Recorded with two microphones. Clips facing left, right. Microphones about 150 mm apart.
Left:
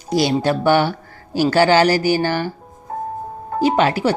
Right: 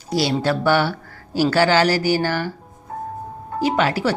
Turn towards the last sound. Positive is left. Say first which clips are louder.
# left 3 dB
turn(degrees=20)  # may be behind; listen again after turning